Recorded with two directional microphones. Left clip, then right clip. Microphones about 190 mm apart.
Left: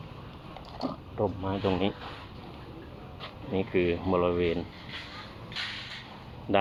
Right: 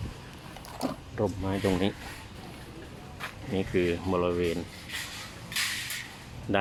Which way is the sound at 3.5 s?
20° right (ahead or behind).